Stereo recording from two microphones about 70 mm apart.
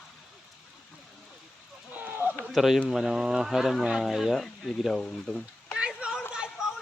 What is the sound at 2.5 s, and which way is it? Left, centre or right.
Speech, centre.